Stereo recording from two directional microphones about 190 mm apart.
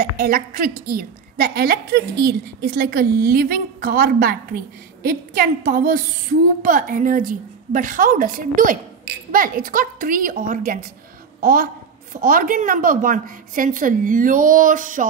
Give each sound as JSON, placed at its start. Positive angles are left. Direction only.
{"t": 0.2, "sound": "a woman's voice", "side_deg": -50}